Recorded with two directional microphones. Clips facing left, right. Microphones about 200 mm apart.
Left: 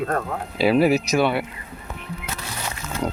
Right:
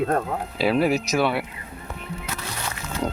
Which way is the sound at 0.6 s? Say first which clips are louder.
Left 4 dB; 5° left (ahead or behind).